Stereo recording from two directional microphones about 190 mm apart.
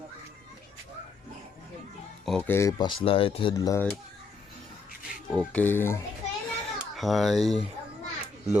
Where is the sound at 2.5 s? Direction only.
15° left (ahead or behind).